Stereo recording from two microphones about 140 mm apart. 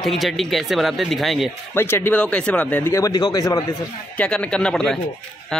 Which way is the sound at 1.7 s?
15° left (ahead or behind).